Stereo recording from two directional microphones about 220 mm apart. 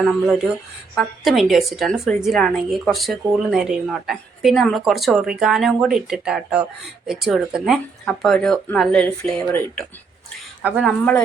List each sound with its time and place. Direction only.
0.9 s a woman's voice: centre (ahead or behind)